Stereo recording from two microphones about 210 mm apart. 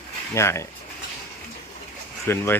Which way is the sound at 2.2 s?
10° left (ahead or behind).